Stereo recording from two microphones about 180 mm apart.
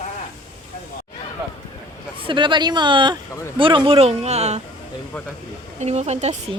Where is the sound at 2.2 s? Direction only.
25° right (ahead or behind).